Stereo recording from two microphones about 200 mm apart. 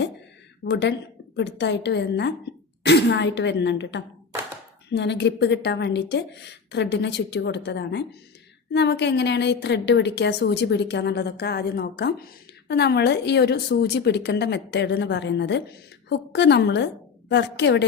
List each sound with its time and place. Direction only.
0.6 s a woman's voice: 60° left (ahead or behind)